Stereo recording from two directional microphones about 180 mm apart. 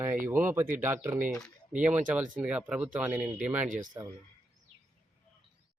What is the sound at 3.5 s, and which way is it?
Speech, 45° right (ahead or behind).